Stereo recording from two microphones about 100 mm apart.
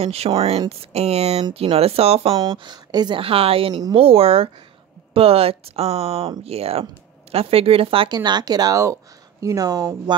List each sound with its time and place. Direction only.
0.0 s speech: 90° right
0.3 s speech: 65° right (ahead or behind); by 1.4 s 90° right
1.5 s speech: 80° right
2.3 s speech: 50° right (ahead or behind)
3.2 s speech: 70° right (ahead or behind)
8.1 s speech: 45° right (ahead or behind)